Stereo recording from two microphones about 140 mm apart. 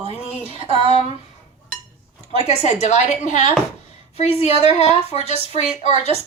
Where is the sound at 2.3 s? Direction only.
50° left (ahead or behind).